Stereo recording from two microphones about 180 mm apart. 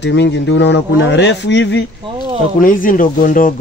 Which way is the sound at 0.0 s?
75° left (ahead or behind).